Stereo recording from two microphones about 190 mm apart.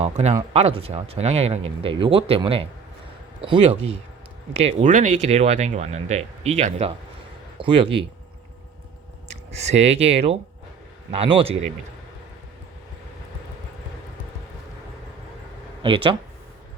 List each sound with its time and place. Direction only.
0.0 s speech: 35° right (ahead or behind)
9.3 s speech: 35° right (ahead or behind)
15.8 s speech: 25° right (ahead or behind)